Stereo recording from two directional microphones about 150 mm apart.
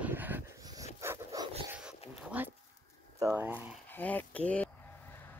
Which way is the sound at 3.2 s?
20° right (ahead or behind).